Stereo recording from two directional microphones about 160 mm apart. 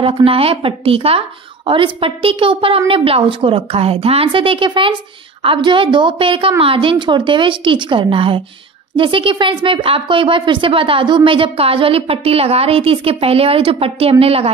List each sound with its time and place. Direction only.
0.0 s speech: 35° right (ahead or behind)